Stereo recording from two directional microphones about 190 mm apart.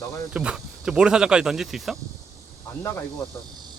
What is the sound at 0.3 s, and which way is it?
Speech, 5° right (ahead or behind).